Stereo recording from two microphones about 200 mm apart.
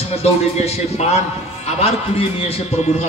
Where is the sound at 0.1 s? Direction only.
30° left (ahead or behind).